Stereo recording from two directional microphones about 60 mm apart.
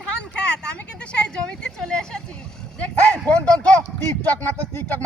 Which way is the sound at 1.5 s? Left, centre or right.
Centre.